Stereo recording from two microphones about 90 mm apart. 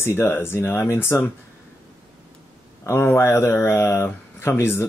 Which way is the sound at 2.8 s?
30° left (ahead or behind).